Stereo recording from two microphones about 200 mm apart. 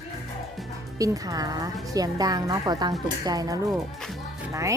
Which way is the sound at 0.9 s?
15° right (ahead or behind).